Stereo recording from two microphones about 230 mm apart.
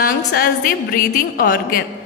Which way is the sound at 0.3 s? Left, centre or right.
Left.